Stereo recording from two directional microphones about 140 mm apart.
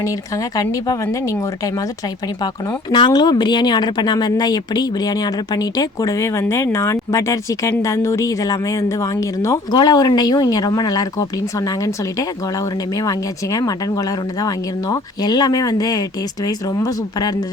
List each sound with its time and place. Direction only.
0.0 s speech: 25° left (ahead or behind)
2.4 s speech: 35° left (ahead or behind)